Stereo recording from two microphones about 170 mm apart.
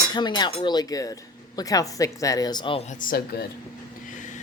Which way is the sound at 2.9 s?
55° left (ahead or behind).